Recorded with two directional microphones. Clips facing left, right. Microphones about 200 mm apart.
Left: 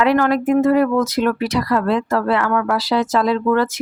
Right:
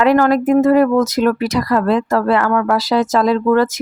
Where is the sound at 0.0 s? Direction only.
45° right (ahead or behind).